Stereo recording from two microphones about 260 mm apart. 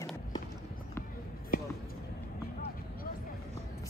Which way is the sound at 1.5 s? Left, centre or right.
Left.